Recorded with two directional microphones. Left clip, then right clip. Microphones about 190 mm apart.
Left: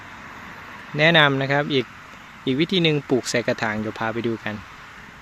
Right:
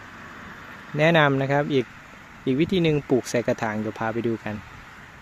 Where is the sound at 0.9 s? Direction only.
5° right (ahead or behind).